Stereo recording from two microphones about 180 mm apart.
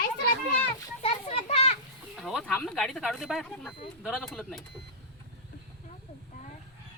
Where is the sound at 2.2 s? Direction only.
5° left (ahead or behind).